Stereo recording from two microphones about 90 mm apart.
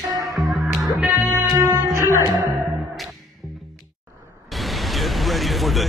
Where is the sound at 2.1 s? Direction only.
45° left (ahead or behind).